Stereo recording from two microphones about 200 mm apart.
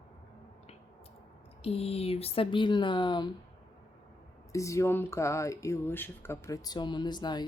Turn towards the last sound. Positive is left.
turn(degrees=20)  # may be behind; listen again after turning